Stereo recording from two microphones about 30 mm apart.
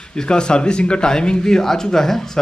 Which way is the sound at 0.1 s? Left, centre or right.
Left.